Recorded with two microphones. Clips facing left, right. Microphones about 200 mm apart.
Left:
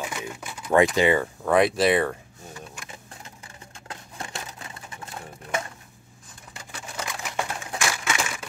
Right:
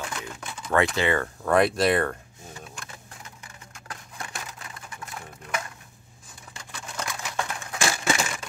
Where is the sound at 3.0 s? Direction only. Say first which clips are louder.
Left 1 dB; 30° left (ahead or behind).